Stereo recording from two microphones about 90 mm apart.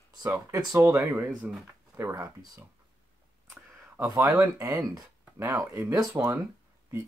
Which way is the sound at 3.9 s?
30° right (ahead or behind).